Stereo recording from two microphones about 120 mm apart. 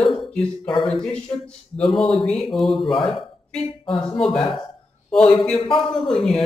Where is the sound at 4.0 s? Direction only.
5° left (ahead or behind).